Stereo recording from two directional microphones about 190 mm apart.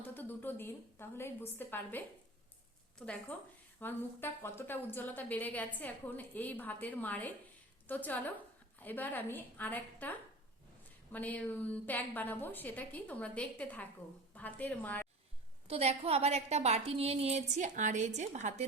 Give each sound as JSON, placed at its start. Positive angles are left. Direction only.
{"t": 0.0, "sound": "a woman's voice", "side_deg": 10}
{"t": 3.8, "sound": "a woman's voice", "side_deg": 10}
{"t": 15.6, "sound": "a woman's voice", "side_deg": -30}